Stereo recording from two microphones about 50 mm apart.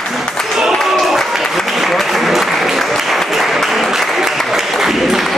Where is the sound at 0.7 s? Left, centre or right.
Centre.